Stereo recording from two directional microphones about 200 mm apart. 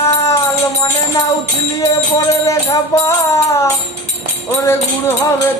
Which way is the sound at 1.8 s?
15° left (ahead or behind).